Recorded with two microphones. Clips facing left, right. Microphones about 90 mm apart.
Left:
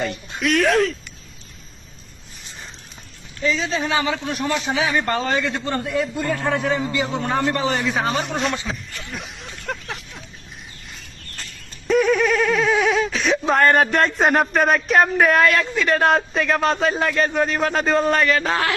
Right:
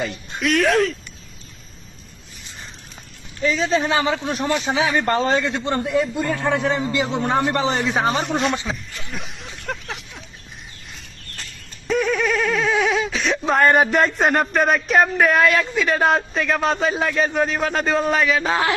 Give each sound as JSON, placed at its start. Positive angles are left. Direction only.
{"t": 0.0, "sound": "speech", "side_deg": 0}
{"t": 3.5, "sound": "a man's voice", "side_deg": -35}
{"t": 5.9, "sound": "speech", "side_deg": -5}
{"t": 6.5, "sound": "a man's voice", "side_deg": -20}
{"t": 8.1, "sound": "speech", "side_deg": 0}
{"t": 9.0, "sound": "a sound", "side_deg": 0}
{"t": 11.9, "sound": "speech", "side_deg": 0}